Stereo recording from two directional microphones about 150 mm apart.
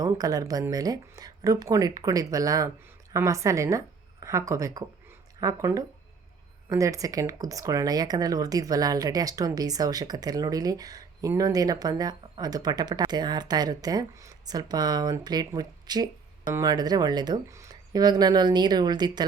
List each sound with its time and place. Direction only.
0.0 s speech: 25° right (ahead or behind)